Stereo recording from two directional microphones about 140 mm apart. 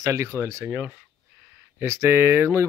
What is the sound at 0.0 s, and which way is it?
Speech, 20° right (ahead or behind).